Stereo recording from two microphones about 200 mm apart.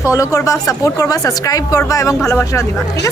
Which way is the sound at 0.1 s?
15° left (ahead or behind).